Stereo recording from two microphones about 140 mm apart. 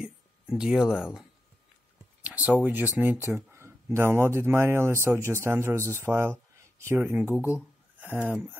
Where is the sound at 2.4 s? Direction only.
10° right (ahead or behind).